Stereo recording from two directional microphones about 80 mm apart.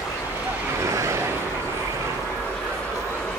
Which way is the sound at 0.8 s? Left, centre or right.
Right.